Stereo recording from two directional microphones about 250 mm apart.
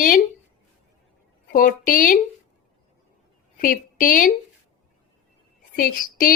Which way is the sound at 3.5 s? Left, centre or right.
Left.